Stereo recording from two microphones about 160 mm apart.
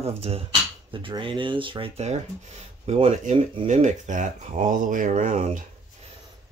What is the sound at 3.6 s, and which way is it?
Speech, 50° right (ahead or behind).